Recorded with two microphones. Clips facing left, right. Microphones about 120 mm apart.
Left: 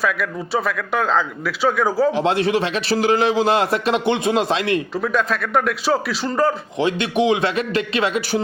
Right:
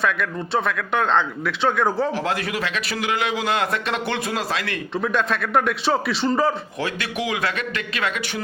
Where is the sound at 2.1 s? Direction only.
25° left (ahead or behind).